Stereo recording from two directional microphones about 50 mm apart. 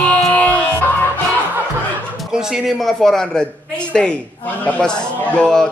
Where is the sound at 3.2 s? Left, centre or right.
Centre.